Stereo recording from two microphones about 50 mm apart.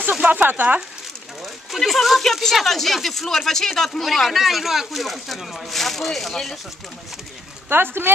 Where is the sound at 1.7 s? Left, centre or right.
Centre.